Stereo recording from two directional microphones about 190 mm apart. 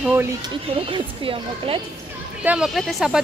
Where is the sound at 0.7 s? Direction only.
30° right (ahead or behind).